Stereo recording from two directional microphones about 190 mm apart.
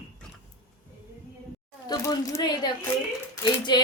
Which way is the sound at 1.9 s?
20° left (ahead or behind).